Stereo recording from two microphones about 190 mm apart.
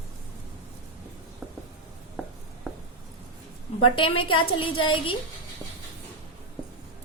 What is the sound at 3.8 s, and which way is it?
A woman's voice, 25° left (ahead or behind).